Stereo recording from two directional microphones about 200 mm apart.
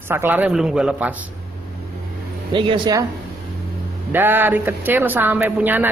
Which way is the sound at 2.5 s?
20° right (ahead or behind).